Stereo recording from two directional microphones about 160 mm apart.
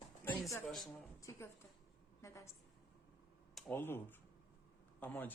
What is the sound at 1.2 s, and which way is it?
A woman's voice, 15° left (ahead or behind).